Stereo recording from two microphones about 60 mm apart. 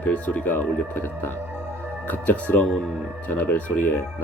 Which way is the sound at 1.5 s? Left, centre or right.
Right.